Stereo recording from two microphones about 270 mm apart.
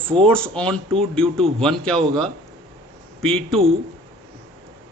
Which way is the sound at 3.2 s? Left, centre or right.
Centre.